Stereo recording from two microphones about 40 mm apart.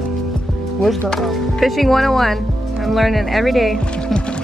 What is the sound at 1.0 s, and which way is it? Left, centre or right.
Speech, centre.